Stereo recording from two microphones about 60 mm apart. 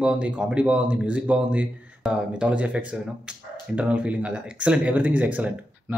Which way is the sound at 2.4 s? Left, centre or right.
Right.